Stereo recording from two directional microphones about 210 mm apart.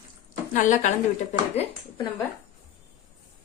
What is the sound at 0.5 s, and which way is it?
Speech, 35° left (ahead or behind).